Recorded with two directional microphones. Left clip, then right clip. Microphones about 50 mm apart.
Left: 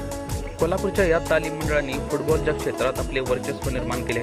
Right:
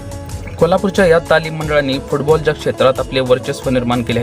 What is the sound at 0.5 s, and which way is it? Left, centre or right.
Speech, left.